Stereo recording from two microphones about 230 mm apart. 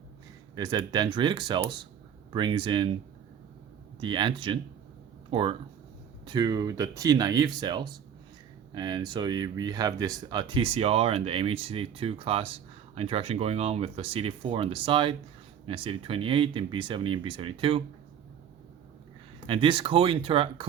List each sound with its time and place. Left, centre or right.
0.5 s speech: centre
4.0 s speech: centre
19.5 s speech: right